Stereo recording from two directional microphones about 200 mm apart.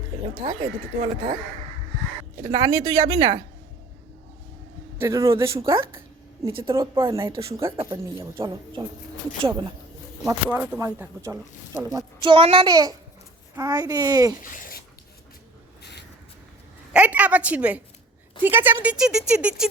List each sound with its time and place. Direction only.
0.4 s speech: 25° right (ahead or behind)
2.4 s speech: 20° right (ahead or behind)
4.9 s speech: 15° right (ahead or behind)
5.7 s speech: 25° right (ahead or behind)
10.2 s speech: 5° right (ahead or behind)
14.4 s speech: 45° left (ahead or behind)
15.8 s a sound: 55° left (ahead or behind)
16.9 s a woman's voice: 5° right (ahead or behind)